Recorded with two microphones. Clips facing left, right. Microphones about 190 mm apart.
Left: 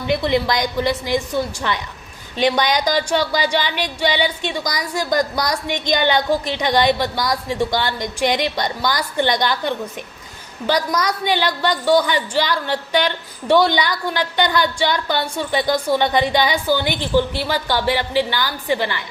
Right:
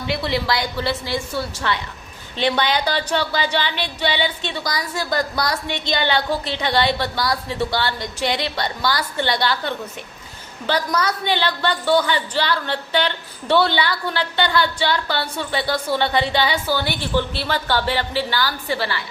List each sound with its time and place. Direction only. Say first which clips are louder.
0.1 s a woman's voice: left 4 dB; 20° left (ahead or behind)